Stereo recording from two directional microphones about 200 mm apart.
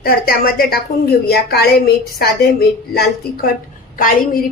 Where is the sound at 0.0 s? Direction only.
50° left (ahead or behind).